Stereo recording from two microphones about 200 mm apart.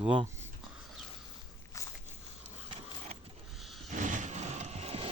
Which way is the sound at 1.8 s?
15° left (ahead or behind).